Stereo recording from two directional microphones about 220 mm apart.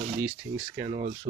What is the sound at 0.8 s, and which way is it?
Speech, 30° right (ahead or behind).